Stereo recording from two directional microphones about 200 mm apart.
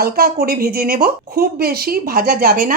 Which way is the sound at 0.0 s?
50° right (ahead or behind).